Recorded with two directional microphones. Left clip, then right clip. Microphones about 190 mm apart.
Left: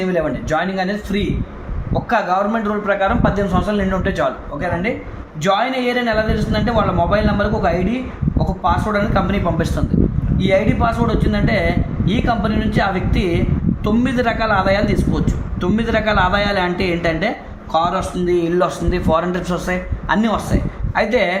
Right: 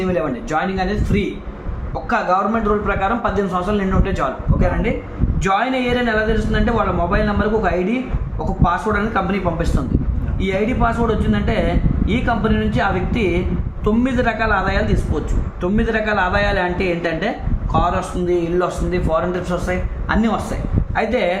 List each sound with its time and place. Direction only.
0.0 s a man's voice: 30° left (ahead or behind)
5.4 s a man's voice: 30° left (ahead or behind)
8.6 s a man's voice: 30° left (ahead or behind)